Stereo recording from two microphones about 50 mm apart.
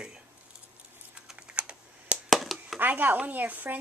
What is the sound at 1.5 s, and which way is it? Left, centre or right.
Computer keyboard, right.